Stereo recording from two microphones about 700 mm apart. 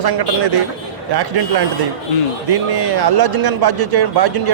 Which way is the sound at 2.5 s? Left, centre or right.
Right.